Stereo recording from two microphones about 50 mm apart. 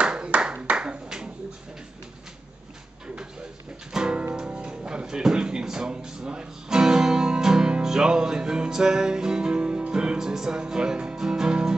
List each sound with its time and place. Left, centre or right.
0.0 s clapping: centre
3.9 s music: centre